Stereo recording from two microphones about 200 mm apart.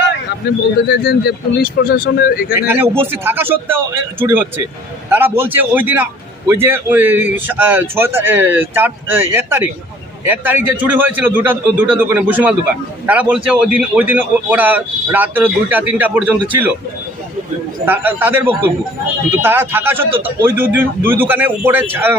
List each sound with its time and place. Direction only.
0.4 s speech: 55° left (ahead or behind)
2.9 s a man's voice: 10° right (ahead or behind)
17.8 s a man's voice: 10° right (ahead or behind)